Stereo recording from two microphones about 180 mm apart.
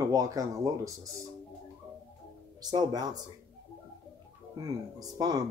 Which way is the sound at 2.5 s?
20° right (ahead or behind).